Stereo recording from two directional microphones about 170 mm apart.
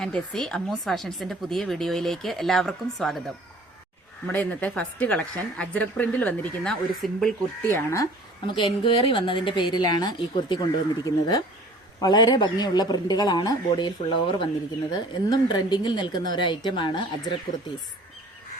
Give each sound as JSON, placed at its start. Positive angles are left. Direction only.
{"t": 0.0, "sound": "speech", "side_deg": 5}
{"t": 4.3, "sound": "a woman's voice", "side_deg": 10}
{"t": 8.4, "sound": "a man's voice", "side_deg": 30}